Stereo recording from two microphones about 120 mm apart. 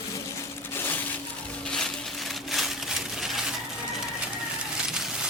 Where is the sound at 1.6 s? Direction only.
5° left (ahead or behind).